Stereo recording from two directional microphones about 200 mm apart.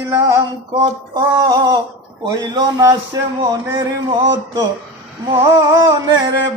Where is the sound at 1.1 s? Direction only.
20° right (ahead or behind).